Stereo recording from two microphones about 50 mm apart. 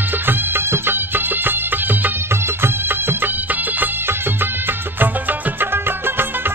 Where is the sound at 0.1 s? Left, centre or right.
Right.